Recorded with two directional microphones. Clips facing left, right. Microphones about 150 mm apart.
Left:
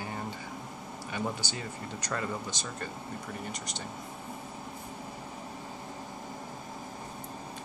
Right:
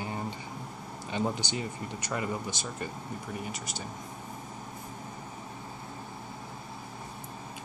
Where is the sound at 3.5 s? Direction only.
5° right (ahead or behind).